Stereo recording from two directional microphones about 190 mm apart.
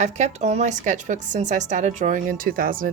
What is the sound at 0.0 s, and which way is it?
Speech, 35° right (ahead or behind).